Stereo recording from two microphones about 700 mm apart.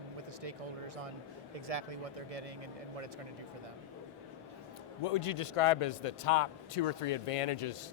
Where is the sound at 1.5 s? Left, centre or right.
Right.